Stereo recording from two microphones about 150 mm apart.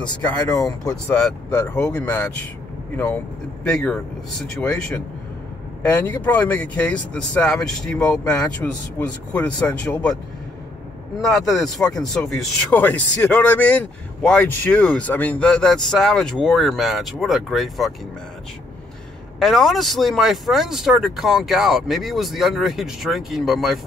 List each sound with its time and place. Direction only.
1.1 s speech: 10° left (ahead or behind)
1.6 s speech: 20° left (ahead or behind)
2.0 s speech: 10° left (ahead or behind)
3.6 s speech: 5° left (ahead or behind)
11.1 s speech: centre (ahead or behind)
19.4 s speech: centre (ahead or behind)